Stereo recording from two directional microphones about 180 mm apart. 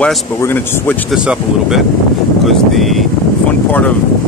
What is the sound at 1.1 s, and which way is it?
Speech, 5° right (ahead or behind).